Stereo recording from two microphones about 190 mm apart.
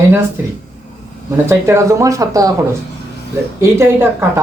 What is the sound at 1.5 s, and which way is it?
Speech, 15° right (ahead or behind).